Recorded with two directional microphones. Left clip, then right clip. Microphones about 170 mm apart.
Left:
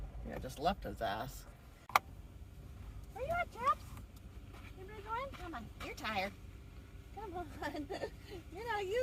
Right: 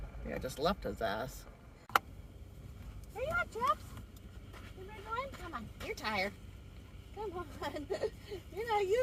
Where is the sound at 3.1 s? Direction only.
50° right (ahead or behind).